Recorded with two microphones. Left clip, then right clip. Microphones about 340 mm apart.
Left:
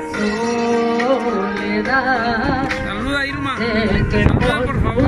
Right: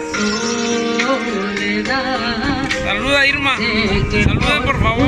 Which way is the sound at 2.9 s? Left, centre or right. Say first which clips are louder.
Right 7 dB; centre.